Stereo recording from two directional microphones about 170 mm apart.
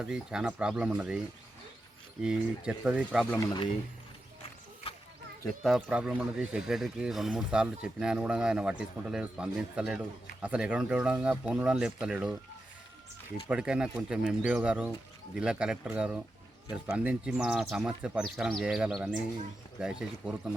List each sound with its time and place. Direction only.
0.0 s speech: 5° right (ahead or behind)
2.2 s speech: 5° right (ahead or behind)
5.6 s speech: 5° right (ahead or behind)
13.5 s speech: 5° right (ahead or behind)